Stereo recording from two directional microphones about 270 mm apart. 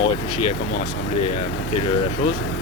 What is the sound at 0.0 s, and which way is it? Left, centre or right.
Speech, left.